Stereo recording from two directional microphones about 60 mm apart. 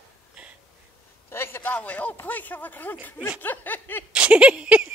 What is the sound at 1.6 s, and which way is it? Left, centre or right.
Speech, left.